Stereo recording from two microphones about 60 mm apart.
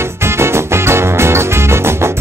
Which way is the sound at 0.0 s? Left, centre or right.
Right.